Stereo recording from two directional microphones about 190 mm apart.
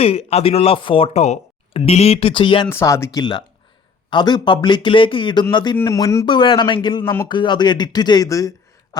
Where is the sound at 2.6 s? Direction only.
15° left (ahead or behind).